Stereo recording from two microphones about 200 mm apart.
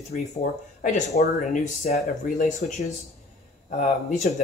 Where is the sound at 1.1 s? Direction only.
40° left (ahead or behind).